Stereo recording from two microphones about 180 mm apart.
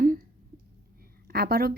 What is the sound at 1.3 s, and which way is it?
Speech, 60° right (ahead or behind).